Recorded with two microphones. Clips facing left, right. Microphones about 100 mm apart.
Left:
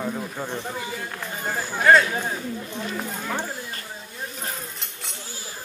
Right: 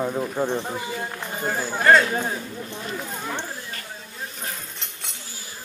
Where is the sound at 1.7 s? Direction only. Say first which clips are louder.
Even; centre (ahead or behind).